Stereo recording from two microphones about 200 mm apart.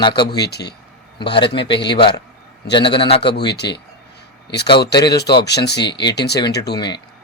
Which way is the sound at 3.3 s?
55° left (ahead or behind).